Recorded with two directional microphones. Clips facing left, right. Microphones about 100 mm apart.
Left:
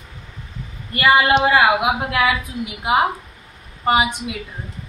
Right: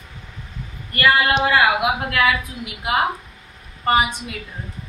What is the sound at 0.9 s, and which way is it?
A woman's voice, 15° left (ahead or behind).